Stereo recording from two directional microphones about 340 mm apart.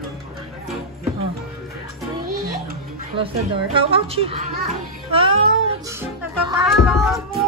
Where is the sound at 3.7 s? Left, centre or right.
Centre.